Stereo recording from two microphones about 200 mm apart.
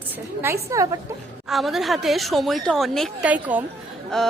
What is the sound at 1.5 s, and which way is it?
Speech, centre (ahead or behind).